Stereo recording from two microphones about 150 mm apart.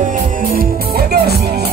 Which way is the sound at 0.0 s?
60° right (ahead or behind).